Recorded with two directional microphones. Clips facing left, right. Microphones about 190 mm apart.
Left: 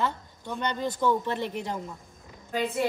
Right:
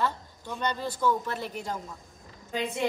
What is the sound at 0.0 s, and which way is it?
A woman's voice, 20° left (ahead or behind).